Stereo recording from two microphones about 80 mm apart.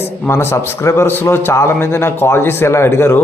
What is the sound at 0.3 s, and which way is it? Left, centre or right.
A man's voice, left.